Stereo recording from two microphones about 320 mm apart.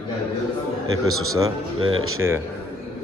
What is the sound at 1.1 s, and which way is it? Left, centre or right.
Speech, right.